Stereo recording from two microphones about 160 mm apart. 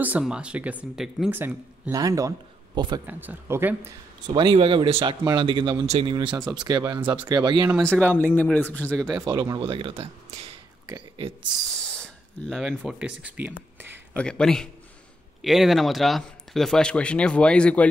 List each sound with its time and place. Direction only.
0.0 s speech: 10° right (ahead or behind)
1.4 s speech: 20° right (ahead or behind)
3.1 s speech: 10° right (ahead or behind)
4.3 s speech: 30° right (ahead or behind)
8.0 s speech: 10° left (ahead or behind)
9.0 s speech: 25° right (ahead or behind)
11.8 s speech: 5° left (ahead or behind)
14.1 s speech: 5° left (ahead or behind)